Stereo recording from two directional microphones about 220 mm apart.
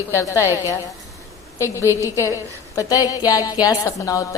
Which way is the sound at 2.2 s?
15° left (ahead or behind).